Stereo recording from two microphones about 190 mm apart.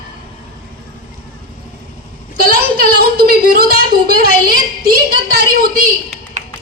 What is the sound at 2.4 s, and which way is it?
A woman's voice, 55° right (ahead or behind).